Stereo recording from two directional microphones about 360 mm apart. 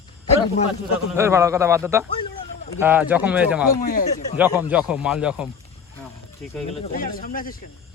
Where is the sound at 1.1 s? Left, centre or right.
Centre.